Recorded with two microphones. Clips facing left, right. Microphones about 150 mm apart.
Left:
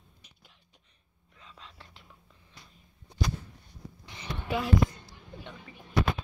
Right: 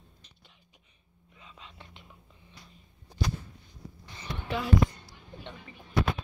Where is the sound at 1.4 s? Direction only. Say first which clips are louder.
Right 1 dB; 5° right (ahead or behind).